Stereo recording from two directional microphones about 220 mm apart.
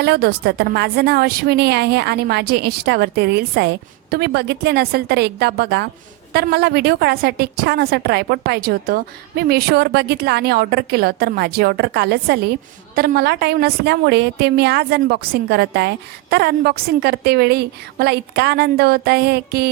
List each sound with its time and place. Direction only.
0.0 s a woman's voice: 45° right (ahead or behind)